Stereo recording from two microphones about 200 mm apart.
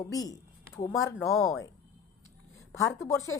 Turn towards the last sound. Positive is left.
turn(degrees=15)  # may be behind; listen again after turning